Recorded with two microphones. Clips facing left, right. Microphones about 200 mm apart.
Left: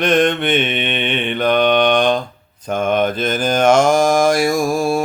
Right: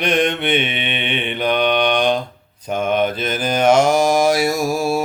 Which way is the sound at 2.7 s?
50° left (ahead or behind).